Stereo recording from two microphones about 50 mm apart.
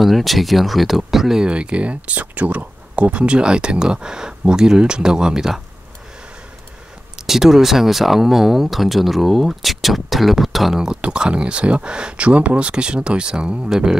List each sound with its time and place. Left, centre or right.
0.0 s speech: centre
1.4 s speech: right
7.2 s speech: centre
11.0 s speech: centre